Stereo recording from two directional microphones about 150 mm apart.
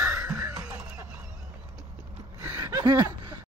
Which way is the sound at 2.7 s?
30° right (ahead or behind).